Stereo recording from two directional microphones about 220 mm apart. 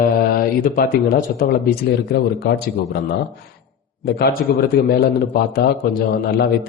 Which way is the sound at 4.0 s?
45° left (ahead or behind).